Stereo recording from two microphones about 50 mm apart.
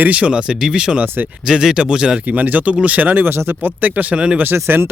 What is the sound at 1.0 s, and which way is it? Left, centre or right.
Speech, right.